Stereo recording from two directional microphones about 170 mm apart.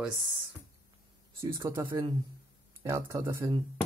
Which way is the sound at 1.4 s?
15° right (ahead or behind).